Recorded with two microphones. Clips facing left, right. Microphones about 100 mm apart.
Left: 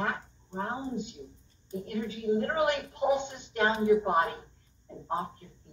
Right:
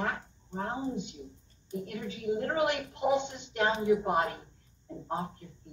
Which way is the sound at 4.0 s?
25° left (ahead or behind).